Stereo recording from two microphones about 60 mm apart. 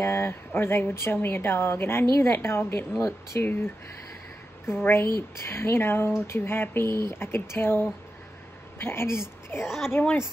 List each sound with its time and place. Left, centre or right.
0.0 s a woman's voice: left
10.0 s a woman's voice: left